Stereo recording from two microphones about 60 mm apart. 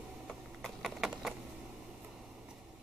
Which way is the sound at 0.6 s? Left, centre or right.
Centre.